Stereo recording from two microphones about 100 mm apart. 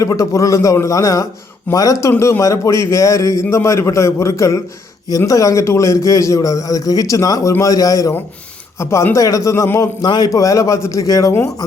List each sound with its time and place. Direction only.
0.0 s a man's voice: 30° left (ahead or behind)
10.0 s a man's voice: 40° left (ahead or behind)